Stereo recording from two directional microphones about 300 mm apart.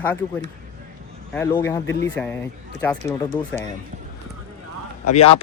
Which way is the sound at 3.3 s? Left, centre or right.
Centre.